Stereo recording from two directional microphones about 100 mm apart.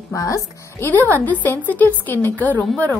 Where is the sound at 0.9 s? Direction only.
15° left (ahead or behind).